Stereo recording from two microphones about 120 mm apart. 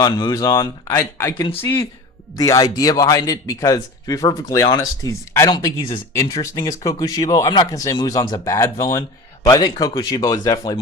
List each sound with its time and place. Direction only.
0.0 s a man's voice: 35° left (ahead or behind)
1.4 s a man's voice: 40° left (ahead or behind)
2.3 s a man's voice: 30° left (ahead or behind)
5.5 s a man's voice: 40° left (ahead or behind)